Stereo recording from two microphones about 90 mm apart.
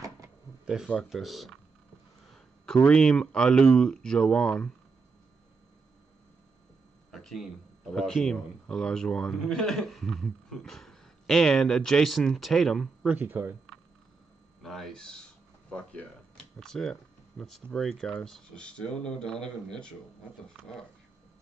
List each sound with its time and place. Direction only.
1.1 s a man's voice: centre (ahead or behind)
2.3 s a sound: 5° left (ahead or behind)
2.8 s speech: 10° left (ahead or behind)
7.1 s a man's voice: 5° left (ahead or behind)
13.0 s speech: 20° right (ahead or behind)
14.6 s a sound: 5° left (ahead or behind)
15.7 s a man's voice: 15° left (ahead or behind)